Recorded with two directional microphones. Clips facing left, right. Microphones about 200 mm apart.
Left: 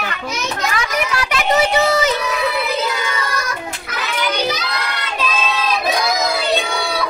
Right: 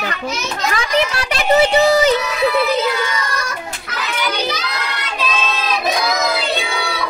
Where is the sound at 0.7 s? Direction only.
30° right (ahead or behind).